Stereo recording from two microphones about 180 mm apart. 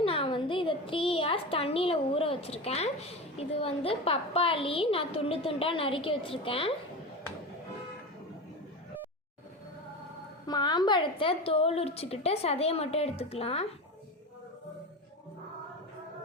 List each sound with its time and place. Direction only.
0.0 s a child's voice: 30° left (ahead or behind)
10.4 s a child's voice: 25° left (ahead or behind)